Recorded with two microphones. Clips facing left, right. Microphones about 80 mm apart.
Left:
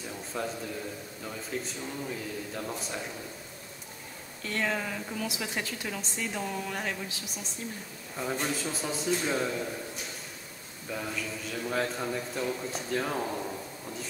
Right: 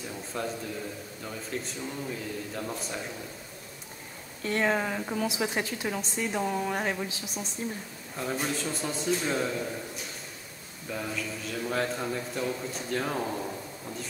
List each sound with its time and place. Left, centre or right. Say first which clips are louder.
0.3 s a man's voice: right 1 dB; centre
4.5 s speech: right 4 dB; right
8.2 s a man's voice: right 1 dB; centre
10.9 s a man's voice: right 1 dB; centre